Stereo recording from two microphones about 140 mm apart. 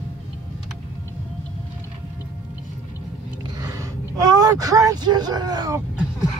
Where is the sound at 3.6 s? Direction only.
25° right (ahead or behind).